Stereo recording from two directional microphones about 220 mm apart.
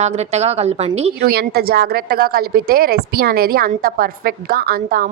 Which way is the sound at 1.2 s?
45° right (ahead or behind).